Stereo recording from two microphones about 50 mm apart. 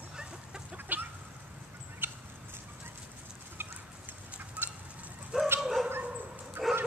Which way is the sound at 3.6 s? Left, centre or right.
Right.